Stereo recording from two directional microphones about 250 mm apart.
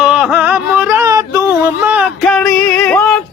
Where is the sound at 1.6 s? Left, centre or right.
Centre.